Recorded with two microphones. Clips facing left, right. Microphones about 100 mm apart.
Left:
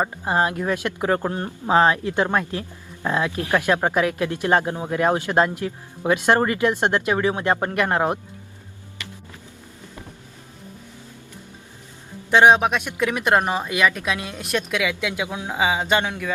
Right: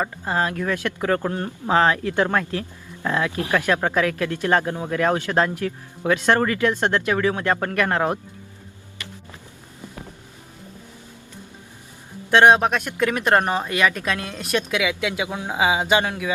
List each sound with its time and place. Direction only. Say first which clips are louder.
0.0 s speech: left 2 dB; 20° left (ahead or behind)
12.3 s speech: even; centre (ahead or behind)